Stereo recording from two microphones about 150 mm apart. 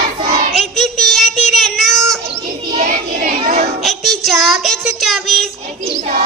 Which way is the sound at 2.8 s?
65° right (ahead or behind).